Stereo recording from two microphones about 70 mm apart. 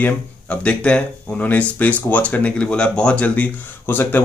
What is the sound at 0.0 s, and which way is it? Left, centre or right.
Speech, centre.